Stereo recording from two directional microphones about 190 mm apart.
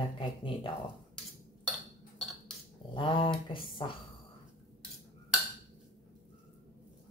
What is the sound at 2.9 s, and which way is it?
Speech, 25° left (ahead or behind).